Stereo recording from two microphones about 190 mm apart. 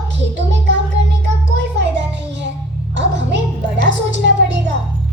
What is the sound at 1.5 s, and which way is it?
Music, 70° right (ahead or behind).